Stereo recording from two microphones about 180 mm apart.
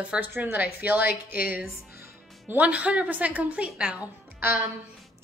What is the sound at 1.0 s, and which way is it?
Speech, 55° left (ahead or behind).